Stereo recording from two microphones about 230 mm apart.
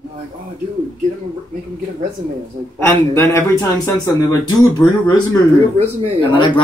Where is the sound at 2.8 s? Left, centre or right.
Centre.